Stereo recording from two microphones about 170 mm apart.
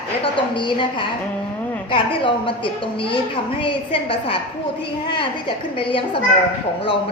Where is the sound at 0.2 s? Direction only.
30° left (ahead or behind).